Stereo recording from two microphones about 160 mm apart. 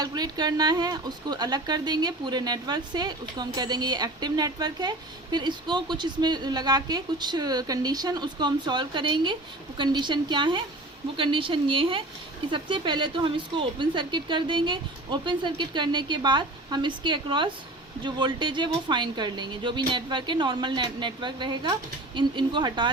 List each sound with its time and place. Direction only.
0.0 s a woman's voice: 25° right (ahead or behind)